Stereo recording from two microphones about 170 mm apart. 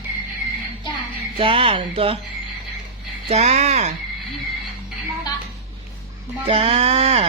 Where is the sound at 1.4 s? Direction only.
30° right (ahead or behind).